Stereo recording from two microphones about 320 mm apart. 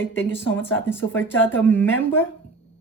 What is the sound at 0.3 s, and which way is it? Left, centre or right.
Speech, centre.